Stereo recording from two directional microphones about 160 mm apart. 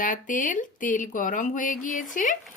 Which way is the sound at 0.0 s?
55° left (ahead or behind).